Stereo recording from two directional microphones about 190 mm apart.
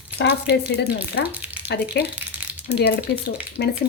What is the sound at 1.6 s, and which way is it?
Speech, 60° left (ahead or behind).